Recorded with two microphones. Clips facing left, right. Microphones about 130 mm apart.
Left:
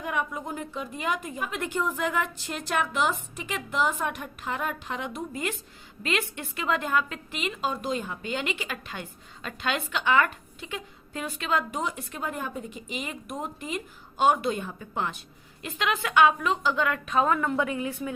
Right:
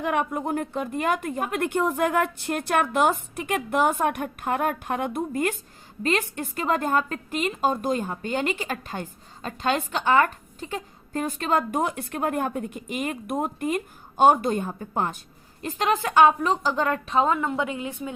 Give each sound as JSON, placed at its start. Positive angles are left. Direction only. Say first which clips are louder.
{"t": 0.0, "sound": "a woman's voice", "louder": "right 6 dB", "side_deg": -60}
{"t": 6.0, "sound": "a woman's voice", "louder": "right 5 dB", "side_deg": -40}